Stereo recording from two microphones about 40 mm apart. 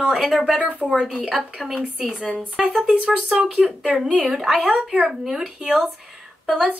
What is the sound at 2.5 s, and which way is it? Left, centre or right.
A woman's voice, right.